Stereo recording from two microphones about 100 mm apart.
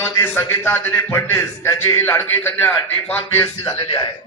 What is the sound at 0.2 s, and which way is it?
A man's voice, 25° left (ahead or behind).